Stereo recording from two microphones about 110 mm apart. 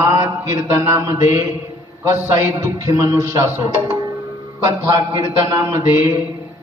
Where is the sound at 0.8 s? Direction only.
25° right (ahead or behind).